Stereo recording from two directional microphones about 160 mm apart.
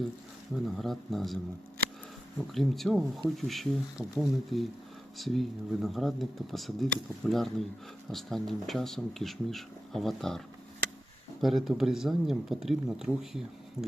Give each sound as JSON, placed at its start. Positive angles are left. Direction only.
{"t": 0.6, "sound": "speech", "side_deg": 0}
{"t": 2.5, "sound": "speech", "side_deg": 0}
{"t": 13.8, "sound": "speech", "side_deg": 15}